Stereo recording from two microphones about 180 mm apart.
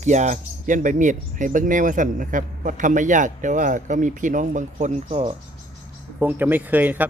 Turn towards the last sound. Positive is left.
turn(degrees=-10)  # may be behind; listen again after turning